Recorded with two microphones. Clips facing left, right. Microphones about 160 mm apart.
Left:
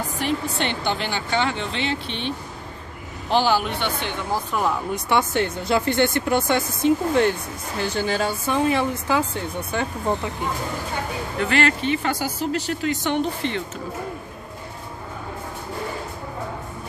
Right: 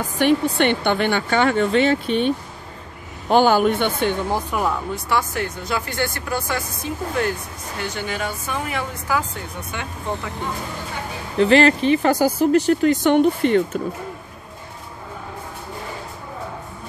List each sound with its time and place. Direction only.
0.2 s speech: 60° right (ahead or behind)
4.5 s speech: 5° right (ahead or behind)
4.9 s speech: 25° left (ahead or behind)
11.3 s speech: 35° right (ahead or behind); by 13.6 s 50° right (ahead or behind)